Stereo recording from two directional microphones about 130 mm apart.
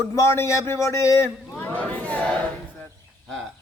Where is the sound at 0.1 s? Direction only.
25° left (ahead or behind).